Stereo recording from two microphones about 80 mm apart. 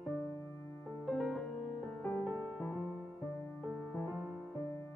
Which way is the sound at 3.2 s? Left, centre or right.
Left.